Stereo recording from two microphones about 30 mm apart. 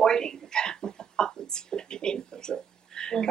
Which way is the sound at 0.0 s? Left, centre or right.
Left.